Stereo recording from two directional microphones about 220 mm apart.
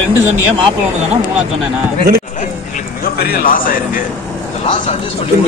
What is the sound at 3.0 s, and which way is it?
A man's voice, 45° left (ahead or behind).